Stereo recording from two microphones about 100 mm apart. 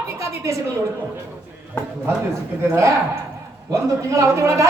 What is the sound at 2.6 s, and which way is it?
A man's voice, 25° right (ahead or behind).